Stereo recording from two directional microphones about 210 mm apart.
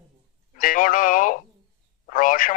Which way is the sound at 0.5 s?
40° left (ahead or behind).